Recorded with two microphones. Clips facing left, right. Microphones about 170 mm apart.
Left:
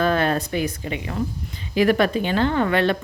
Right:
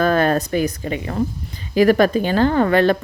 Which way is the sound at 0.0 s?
45° right (ahead or behind).